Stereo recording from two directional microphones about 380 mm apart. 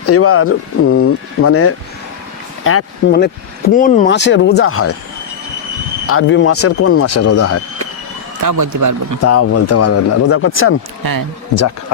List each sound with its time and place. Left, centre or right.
0.0 s speech: left
6.1 s speech: left
8.4 s speech: right
9.2 s speech: left
11.0 s speech: right